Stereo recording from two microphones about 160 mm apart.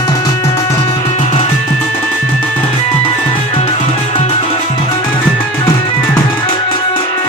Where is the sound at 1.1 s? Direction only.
45° left (ahead or behind).